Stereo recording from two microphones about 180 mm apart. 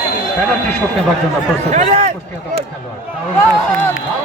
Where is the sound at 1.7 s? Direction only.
45° right (ahead or behind).